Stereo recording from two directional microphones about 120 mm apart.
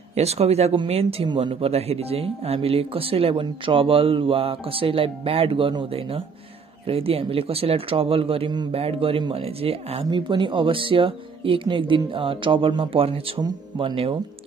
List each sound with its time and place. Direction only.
0.1 s speech: 60° right (ahead or behind)
10.0 s speech: 40° right (ahead or behind)